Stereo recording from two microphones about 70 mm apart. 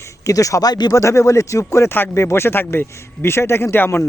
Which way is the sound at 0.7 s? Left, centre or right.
Left.